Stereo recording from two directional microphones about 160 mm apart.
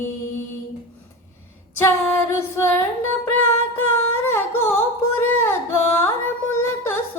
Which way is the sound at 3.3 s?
15° left (ahead or behind).